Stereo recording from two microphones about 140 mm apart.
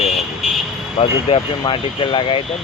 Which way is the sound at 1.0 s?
45° left (ahead or behind).